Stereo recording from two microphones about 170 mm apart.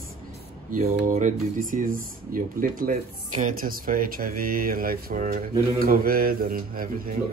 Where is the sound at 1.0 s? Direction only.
50° right (ahead or behind).